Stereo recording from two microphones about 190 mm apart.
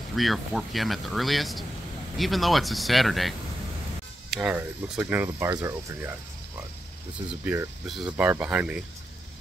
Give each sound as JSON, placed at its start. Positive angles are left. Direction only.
{"t": 0.1, "sound": "speech", "side_deg": 0}